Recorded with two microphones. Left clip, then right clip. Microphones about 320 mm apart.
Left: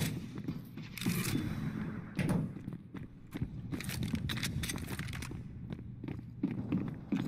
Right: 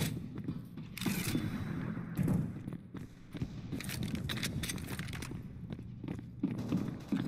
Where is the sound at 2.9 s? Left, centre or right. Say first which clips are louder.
Left 1 dB; centre.